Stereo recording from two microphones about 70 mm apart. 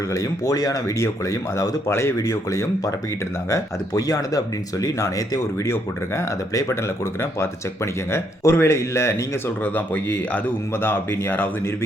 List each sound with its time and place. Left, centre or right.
0.1 s speech: left
0.9 s speech: left
1.9 s speech: left
2.1 s speech: left
3.5 s speech: left
5.6 s speech: left
9.6 s speech: left